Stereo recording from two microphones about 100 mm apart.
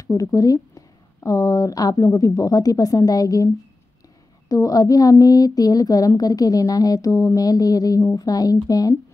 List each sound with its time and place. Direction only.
0.0 s speech: 35° left (ahead or behind)
4.5 s speech: 35° left (ahead or behind)